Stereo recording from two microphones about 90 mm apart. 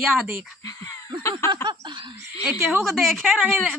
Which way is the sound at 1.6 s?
60° right (ahead or behind).